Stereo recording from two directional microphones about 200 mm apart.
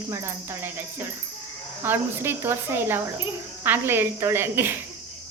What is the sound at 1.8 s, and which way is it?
Speech, 10° right (ahead or behind).